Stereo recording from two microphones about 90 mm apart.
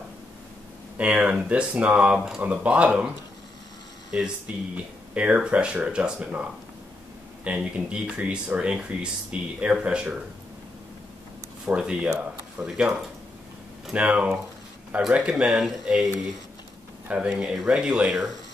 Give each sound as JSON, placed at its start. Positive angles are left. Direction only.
{"t": 0.9, "sound": "speech", "side_deg": -15}
{"t": 4.1, "sound": "speech", "side_deg": -15}
{"t": 7.4, "sound": "speech", "side_deg": -10}
{"t": 11.6, "sound": "speech", "side_deg": -10}
{"t": 17.3, "sound": "speech", "side_deg": -5}